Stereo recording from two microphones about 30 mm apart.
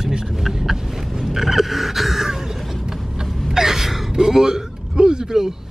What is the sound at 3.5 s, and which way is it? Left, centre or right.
Gasp, centre.